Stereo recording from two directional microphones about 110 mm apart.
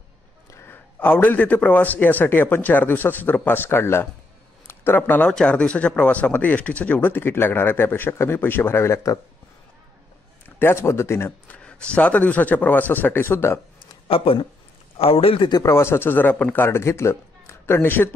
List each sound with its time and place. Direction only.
0.5 s speech: 20° left (ahead or behind)
10.4 s speech: 20° left (ahead or behind)
14.0 s a man's voice: 55° left (ahead or behind)
15.5 s a man's voice: 25° left (ahead or behind)